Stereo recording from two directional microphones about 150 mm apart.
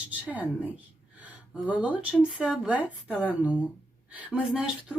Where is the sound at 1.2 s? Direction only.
10° right (ahead or behind).